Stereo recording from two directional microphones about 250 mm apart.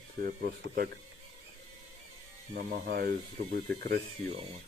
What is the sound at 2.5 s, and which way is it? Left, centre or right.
Speech, right.